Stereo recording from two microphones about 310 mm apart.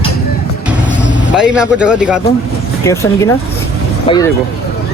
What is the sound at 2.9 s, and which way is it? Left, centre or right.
Speech, centre.